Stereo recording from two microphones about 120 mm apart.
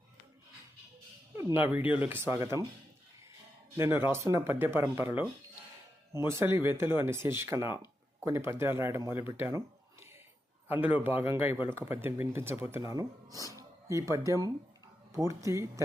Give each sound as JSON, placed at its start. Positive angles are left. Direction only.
{"t": 1.4, "sound": "speech", "side_deg": -20}
{"t": 3.8, "sound": "speech", "side_deg": -20}